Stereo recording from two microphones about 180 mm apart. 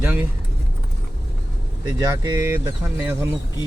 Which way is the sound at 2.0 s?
20° right (ahead or behind).